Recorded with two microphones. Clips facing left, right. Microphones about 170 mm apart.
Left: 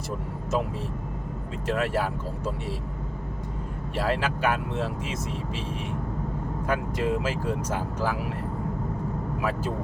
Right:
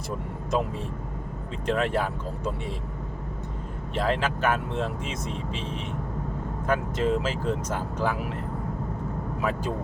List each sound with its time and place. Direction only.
1.6 s speech: 5° left (ahead or behind)
3.9 s speech: 5° left (ahead or behind)
6.7 s speech: 10° left (ahead or behind)
9.4 s speech: 5° left (ahead or behind)